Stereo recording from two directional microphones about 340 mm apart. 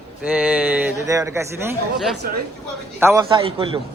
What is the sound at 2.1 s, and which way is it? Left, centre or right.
Speech, right.